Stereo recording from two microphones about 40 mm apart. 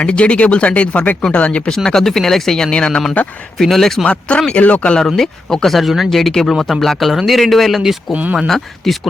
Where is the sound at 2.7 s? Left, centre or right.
Left.